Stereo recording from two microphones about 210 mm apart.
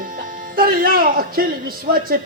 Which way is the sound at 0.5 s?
45° right (ahead or behind).